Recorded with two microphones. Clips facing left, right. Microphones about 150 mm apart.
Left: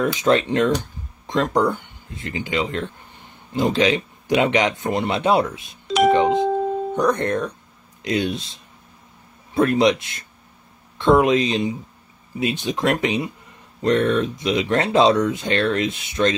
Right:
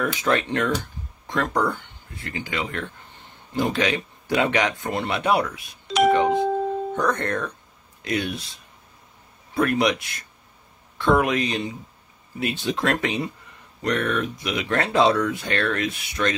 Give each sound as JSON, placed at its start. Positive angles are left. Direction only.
{"t": 0.0, "sound": "speech", "side_deg": 20}
{"t": 13.8, "sound": "speech", "side_deg": 25}